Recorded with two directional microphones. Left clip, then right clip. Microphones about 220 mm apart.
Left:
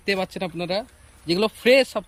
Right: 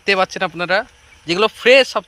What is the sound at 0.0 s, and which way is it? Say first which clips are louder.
Speech: right 9 dB; 5° left (ahead or behind).